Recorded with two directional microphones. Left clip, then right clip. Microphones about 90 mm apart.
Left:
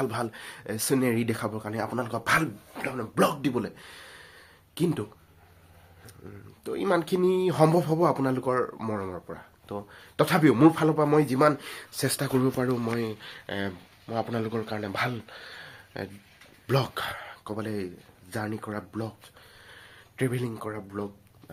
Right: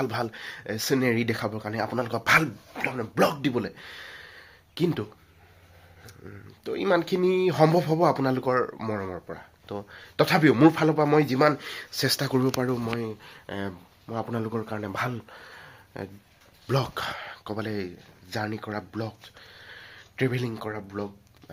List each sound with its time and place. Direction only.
0.0 s speech: 10° right (ahead or behind); by 3.1 s 30° right (ahead or behind)
3.2 s speech: 20° right (ahead or behind)
6.3 s speech: 10° right (ahead or behind)
11.3 s speech: 5° right (ahead or behind)
15.6 s a sound: 10° right (ahead or behind)
16.6 s speech: centre (ahead or behind)
16.9 s speech: 15° right (ahead or behind)
18.4 s speech: 10° right (ahead or behind)
19.5 s a sound: 30° right (ahead or behind)